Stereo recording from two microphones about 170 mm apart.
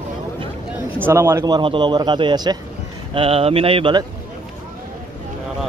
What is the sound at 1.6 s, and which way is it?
Speech, 30° right (ahead or behind).